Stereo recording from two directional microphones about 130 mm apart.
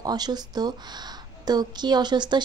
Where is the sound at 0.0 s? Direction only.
30° right (ahead or behind).